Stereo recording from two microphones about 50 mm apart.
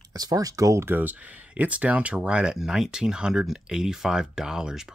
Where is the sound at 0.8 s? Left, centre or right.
Right.